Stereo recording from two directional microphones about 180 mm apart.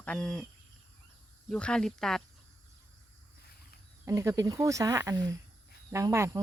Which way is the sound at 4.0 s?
15° right (ahead or behind).